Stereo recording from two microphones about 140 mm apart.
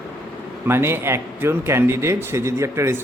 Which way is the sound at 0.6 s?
15° right (ahead or behind).